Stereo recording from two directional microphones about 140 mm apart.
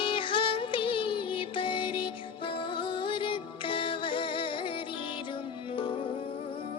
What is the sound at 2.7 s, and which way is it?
Music, 35° left (ahead or behind).